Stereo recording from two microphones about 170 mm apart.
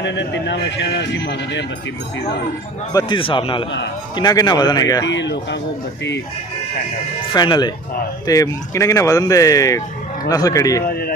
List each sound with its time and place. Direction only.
0.0 s speech: 90° left
2.9 s speech: 25° left (ahead or behind)
5.0 s speech: 90° left
7.3 s speech: 25° left (ahead or behind)